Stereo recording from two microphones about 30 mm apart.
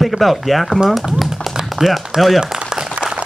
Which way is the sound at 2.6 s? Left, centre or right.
Right.